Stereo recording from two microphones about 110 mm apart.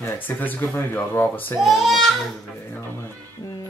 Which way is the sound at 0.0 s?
15° left (ahead or behind).